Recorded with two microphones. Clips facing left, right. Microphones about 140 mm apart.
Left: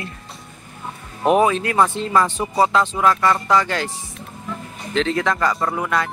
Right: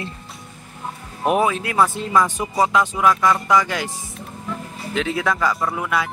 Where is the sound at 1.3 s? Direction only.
5° right (ahead or behind).